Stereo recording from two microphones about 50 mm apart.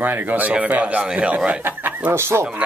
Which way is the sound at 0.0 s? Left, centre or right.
Right.